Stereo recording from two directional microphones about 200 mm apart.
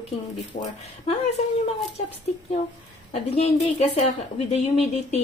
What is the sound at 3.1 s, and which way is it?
Speech, 30° left (ahead or behind).